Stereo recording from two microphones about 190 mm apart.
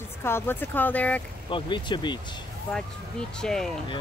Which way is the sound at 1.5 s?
25° left (ahead or behind).